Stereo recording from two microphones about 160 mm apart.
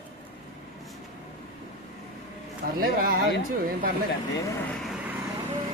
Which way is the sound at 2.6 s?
70° right (ahead or behind).